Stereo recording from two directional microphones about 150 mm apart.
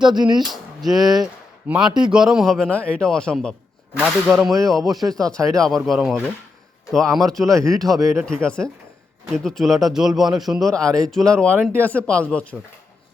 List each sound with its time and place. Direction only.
0.1 s speech: 30° right (ahead or behind)
0.4 s speech: centre (ahead or behind)
7.9 s speech: 20° right (ahead or behind)
8.4 s speech: 5° left (ahead or behind)